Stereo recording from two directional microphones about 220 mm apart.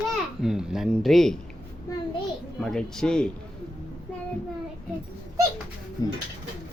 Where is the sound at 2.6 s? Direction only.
Centre (ahead or behind).